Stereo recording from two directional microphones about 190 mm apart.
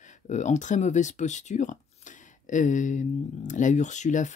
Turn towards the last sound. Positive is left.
turn(degrees=40)  # may be behind; listen again after turning